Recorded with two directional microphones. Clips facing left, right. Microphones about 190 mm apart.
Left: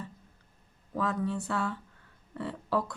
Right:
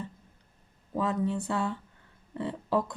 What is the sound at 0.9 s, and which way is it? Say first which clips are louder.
Speech: right 2 dB; 20° right (ahead or behind).